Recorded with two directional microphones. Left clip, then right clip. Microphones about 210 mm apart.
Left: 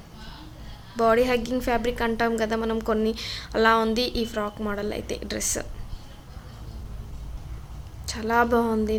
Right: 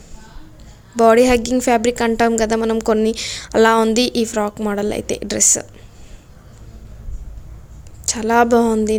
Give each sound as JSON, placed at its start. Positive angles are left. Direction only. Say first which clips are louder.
{"t": 0.9, "sound": "a woman's voice", "louder": "right 9 dB", "side_deg": -45}
{"t": 8.1, "sound": "a woman's voice", "louder": "right 8 dB", "side_deg": -45}